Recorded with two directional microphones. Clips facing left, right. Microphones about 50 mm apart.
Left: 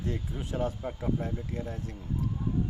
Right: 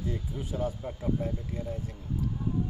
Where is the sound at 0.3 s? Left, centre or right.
Left.